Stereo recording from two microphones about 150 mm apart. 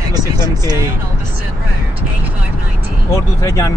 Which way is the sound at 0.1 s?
25° right (ahead or behind).